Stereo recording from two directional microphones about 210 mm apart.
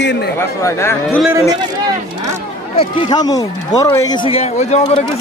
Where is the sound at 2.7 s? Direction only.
25° left (ahead or behind).